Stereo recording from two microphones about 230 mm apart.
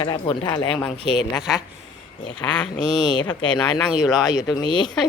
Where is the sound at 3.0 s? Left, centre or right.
Centre.